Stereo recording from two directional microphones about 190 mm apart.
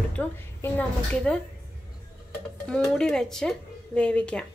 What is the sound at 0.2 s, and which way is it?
A woman's voice, 5° left (ahead or behind).